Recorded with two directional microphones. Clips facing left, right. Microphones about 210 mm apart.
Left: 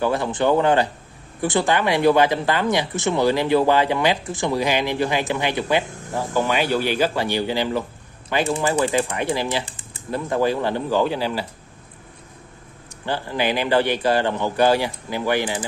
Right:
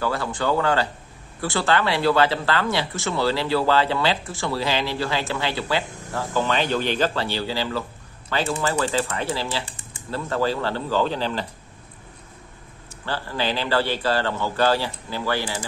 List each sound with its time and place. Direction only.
0.0 s speech: 20° left (ahead or behind)
13.0 s speech: 15° left (ahead or behind)